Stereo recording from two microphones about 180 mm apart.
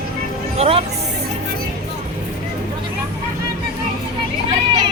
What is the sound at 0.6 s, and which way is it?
Speech, 35° right (ahead or behind).